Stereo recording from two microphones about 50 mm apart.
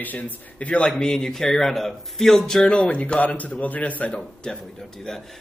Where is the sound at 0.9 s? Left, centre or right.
Centre; by 4.2 s left.